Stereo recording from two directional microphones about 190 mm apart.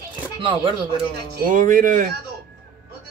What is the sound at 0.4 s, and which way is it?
Speech, 25° right (ahead or behind).